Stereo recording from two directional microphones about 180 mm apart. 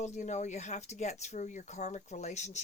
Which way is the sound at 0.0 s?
40° left (ahead or behind).